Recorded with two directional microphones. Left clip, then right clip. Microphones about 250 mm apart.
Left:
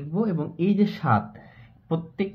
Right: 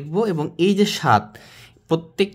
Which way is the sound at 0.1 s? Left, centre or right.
Right.